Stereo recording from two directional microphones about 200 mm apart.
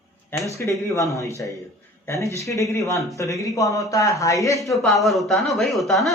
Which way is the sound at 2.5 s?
15° left (ahead or behind).